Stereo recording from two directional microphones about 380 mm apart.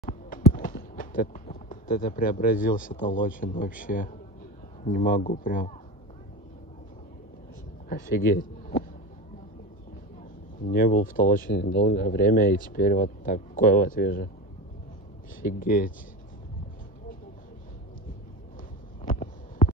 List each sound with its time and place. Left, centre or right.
0.3 s speech: centre
7.9 s a man's voice: left
10.6 s speech: left
15.4 s speech: left
19.0 s hum: centre